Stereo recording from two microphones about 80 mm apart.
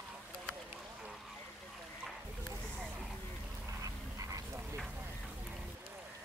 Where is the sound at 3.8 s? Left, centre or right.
Right.